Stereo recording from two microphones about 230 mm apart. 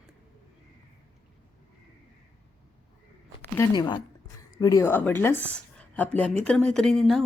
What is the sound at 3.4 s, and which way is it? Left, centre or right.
A woman's voice, centre.